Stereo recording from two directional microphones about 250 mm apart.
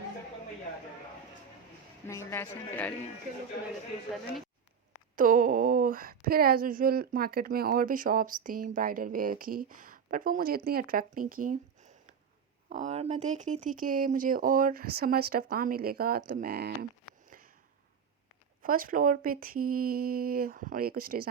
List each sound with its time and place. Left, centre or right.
2.0 s speech: centre
5.1 s speech: right
17.2 s a sound: right
18.6 s speech: right